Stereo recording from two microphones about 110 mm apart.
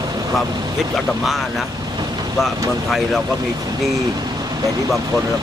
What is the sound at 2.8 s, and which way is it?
Speech, centre (ahead or behind).